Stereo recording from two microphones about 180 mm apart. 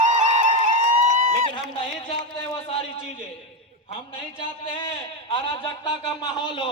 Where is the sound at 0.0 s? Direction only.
45° right (ahead or behind).